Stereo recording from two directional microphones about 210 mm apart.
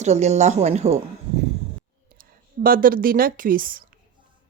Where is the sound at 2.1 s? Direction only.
40° right (ahead or behind).